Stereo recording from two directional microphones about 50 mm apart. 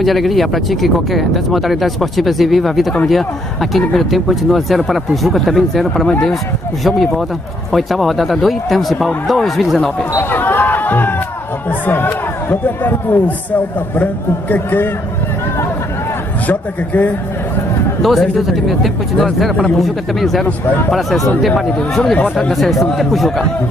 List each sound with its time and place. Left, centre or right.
0.0 s speech: centre
10.3 s a sound: left
11.8 s a man's voice: left
16.4 s a man's voice: left
18.0 s speech: centre
20.4 s a man's voice: left
21.4 s speech: centre
22.1 s speech: left
22.5 s speech: centre